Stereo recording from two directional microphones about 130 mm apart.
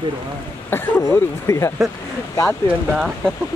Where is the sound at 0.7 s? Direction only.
15° left (ahead or behind).